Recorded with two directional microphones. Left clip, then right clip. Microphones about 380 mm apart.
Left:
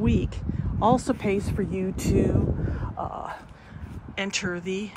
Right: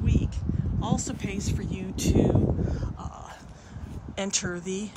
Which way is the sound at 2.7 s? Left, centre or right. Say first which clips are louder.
Left 6 dB; centre.